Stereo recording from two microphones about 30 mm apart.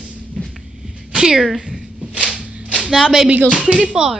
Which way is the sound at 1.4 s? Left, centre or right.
Centre.